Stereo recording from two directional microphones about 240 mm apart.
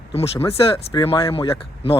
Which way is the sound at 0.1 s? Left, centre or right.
Left.